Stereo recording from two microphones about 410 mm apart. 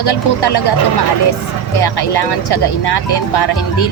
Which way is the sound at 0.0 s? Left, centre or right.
Left.